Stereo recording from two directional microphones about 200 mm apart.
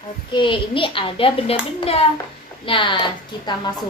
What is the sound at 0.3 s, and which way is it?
Speech, 25° left (ahead or behind).